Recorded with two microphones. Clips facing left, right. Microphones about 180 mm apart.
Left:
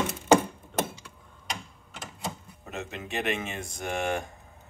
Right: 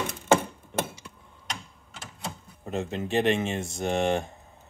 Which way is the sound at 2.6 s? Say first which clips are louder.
Right 7 dB; 30° right (ahead or behind).